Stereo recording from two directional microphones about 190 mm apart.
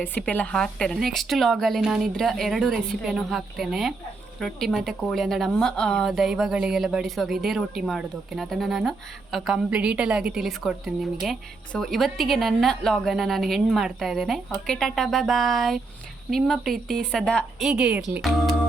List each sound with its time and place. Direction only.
0.0 s speech: 10° left (ahead or behind)